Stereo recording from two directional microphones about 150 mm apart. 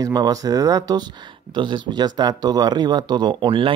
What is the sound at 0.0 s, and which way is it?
Speech, 25° right (ahead or behind).